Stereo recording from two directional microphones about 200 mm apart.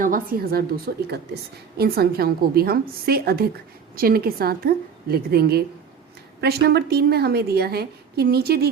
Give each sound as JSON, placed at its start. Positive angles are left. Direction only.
{"t": 0.0, "sound": "a woman's voice", "side_deg": -45}